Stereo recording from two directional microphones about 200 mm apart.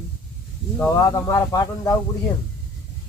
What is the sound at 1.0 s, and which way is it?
Speech, 15° left (ahead or behind).